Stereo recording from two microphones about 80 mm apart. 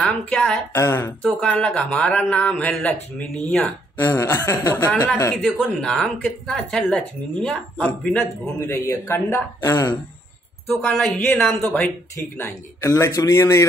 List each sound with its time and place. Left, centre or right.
0.0 s speech: centre
0.7 s a man's voice: left
1.2 s speech: centre
4.0 s a man's voice: left
5.4 s speech: centre
8.6 s a man's voice: left
10.8 s speech: centre
11.2 s speech: left
12.9 s a man's voice: left